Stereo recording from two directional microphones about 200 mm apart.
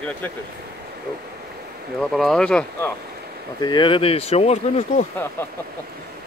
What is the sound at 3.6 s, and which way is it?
Speech, 25° left (ahead or behind).